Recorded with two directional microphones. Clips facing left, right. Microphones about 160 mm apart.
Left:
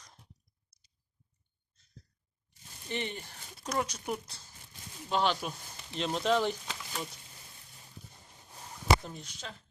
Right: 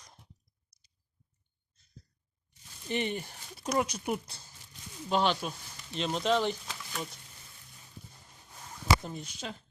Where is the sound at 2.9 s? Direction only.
15° right (ahead or behind).